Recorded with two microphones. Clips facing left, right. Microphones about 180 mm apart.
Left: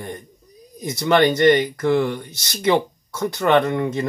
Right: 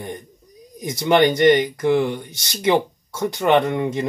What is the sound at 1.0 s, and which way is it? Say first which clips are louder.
Speech: even; 15° right (ahead or behind).